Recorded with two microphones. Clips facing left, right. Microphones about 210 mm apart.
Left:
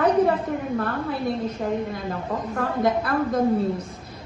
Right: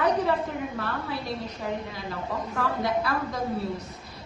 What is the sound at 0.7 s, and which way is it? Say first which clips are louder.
A woman's voice: left 6 dB; 50° left (ahead or behind).